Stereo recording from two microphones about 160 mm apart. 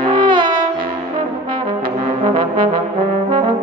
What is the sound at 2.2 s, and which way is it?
Brass instrument, 30° right (ahead or behind).